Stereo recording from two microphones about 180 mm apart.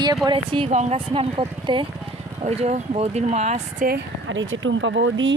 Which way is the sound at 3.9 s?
90° right.